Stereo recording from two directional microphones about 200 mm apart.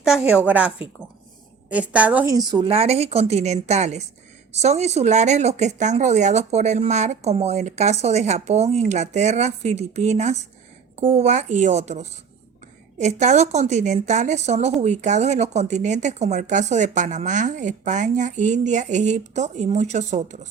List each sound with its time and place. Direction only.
0.0 s a woman's voice: 5° right (ahead or behind); by 20.5 s 35° right (ahead or behind)